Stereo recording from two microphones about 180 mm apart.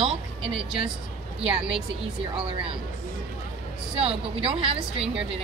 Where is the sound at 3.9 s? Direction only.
30° right (ahead or behind).